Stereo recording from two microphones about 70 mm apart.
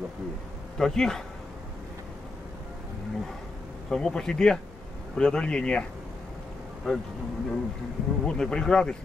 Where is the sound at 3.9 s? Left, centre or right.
Centre.